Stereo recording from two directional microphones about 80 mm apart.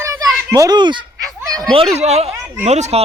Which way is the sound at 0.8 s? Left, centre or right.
Right.